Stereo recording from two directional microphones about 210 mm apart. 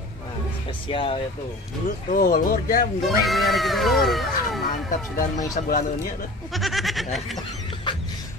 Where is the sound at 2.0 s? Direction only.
40° left (ahead or behind).